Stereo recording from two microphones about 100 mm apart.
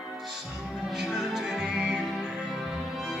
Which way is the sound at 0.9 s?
5° right (ahead or behind).